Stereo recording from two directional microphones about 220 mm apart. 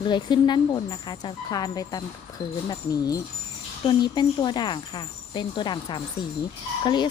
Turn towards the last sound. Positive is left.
turn(degrees=20)  # may be behind; listen again after turning